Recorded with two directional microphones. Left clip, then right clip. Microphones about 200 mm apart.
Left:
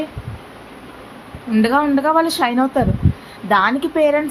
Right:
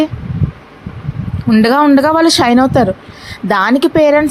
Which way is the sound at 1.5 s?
45° right (ahead or behind).